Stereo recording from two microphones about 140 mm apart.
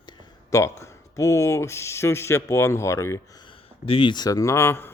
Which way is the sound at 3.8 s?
40° left (ahead or behind).